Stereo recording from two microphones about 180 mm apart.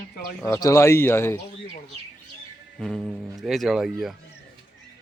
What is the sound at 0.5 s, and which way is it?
Speech, 15° left (ahead or behind).